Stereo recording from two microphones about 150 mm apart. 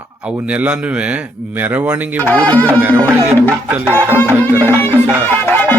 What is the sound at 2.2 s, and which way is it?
Speech, 10° left (ahead or behind).